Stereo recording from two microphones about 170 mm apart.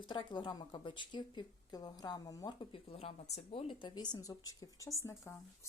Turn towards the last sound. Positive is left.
turn(degrees=15)  # may be behind; listen again after turning